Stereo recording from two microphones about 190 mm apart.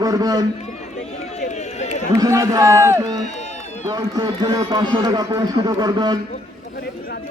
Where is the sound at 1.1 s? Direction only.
35° left (ahead or behind).